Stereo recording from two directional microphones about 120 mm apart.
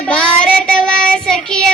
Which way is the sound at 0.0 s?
10° left (ahead or behind).